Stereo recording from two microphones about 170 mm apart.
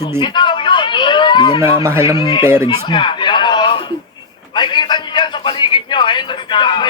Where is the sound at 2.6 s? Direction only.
25° left (ahead or behind).